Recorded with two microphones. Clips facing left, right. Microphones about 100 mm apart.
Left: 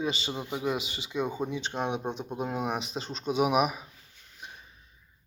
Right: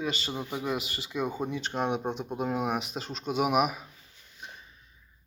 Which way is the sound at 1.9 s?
10° right (ahead or behind).